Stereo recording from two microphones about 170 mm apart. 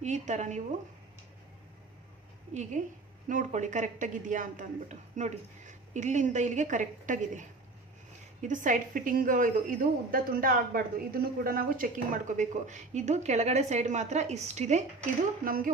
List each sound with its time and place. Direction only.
0.0 s a woman's voice: 45° right (ahead or behind)
2.5 s a woman's voice: 45° right (ahead or behind)
15.4 s speech: 55° right (ahead or behind)